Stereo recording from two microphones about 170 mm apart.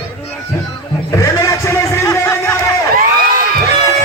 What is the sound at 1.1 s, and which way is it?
Music, 20° left (ahead or behind).